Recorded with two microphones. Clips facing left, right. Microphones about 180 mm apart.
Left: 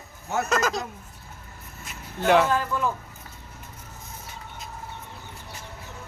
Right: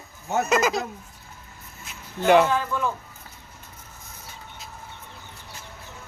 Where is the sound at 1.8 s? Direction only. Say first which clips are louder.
Right 2 dB; centre (ahead or behind).